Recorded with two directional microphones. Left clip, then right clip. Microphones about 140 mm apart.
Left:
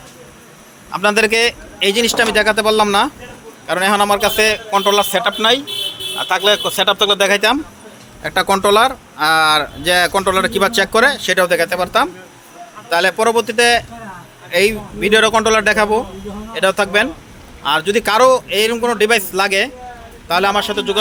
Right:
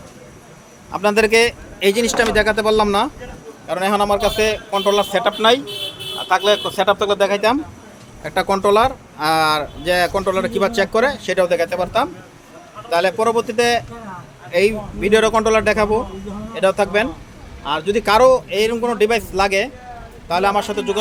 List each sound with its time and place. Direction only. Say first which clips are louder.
0.9 s a man's voice: left 2 dB; 5° right (ahead or behind)
6.1 s speech: left 1 dB; centre (ahead or behind)
17.6 s a man's voice: left 4 dB; 5° left (ahead or behind)